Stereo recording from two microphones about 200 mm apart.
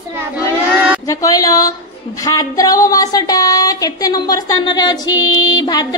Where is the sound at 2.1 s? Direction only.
15° left (ahead or behind).